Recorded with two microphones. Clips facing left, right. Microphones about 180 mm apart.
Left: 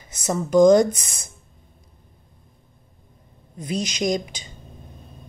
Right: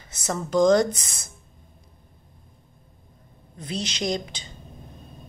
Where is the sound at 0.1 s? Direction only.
15° left (ahead or behind).